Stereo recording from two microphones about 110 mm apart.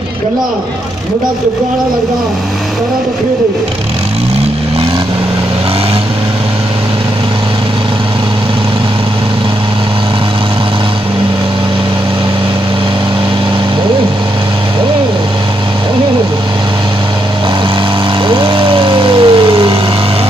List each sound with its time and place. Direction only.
18.3 s vehicle: 50° right (ahead or behind)